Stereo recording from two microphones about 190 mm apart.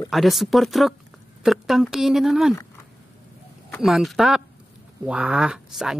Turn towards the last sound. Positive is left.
turn(degrees=-5)  # may be behind; listen again after turning